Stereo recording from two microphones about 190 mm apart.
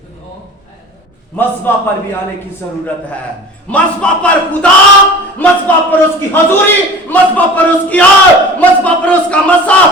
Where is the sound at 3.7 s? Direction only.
5° left (ahead or behind).